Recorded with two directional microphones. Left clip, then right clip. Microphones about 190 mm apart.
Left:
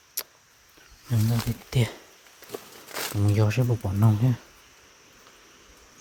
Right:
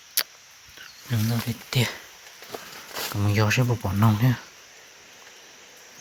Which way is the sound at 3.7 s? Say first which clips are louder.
Right 2 dB; 5° right (ahead or behind).